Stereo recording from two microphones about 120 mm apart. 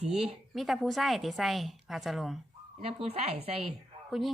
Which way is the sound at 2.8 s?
55° right (ahead or behind).